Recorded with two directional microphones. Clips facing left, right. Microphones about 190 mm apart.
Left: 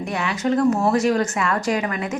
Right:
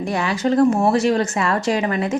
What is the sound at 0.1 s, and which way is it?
Speech, 35° right (ahead or behind).